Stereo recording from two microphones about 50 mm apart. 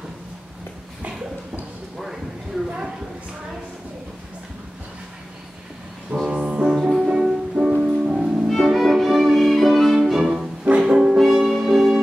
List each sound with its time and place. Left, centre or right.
2.0 s a sound: centre
6.2 s music: right
6.6 s music: centre; by 8.2 s right
8.2 s music: centre